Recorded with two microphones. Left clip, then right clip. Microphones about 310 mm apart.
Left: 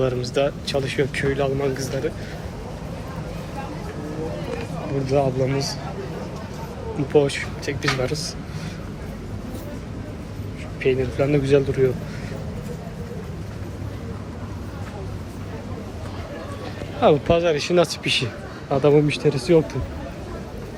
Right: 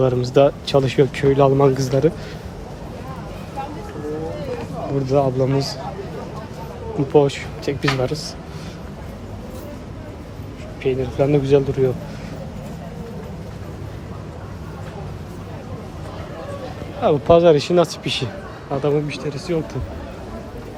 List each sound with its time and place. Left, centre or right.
0.0 s speech: centre
5.0 s speech: centre
7.1 s speech: centre
10.8 s speech: centre
17.0 s speech: centre